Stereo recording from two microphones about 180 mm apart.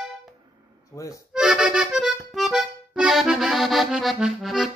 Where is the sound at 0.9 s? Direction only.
15° left (ahead or behind).